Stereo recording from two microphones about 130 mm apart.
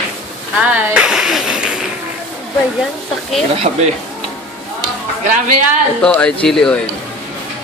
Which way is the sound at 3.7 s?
65° right (ahead or behind).